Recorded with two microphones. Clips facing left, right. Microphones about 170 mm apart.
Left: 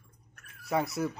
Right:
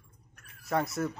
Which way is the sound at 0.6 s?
Centre (ahead or behind).